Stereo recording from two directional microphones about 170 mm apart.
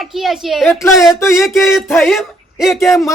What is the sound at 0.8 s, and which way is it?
Speech, 15° left (ahead or behind).